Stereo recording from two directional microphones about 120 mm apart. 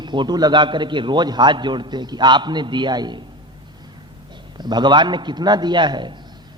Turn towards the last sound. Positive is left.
turn(degrees=-40)  # may be behind; listen again after turning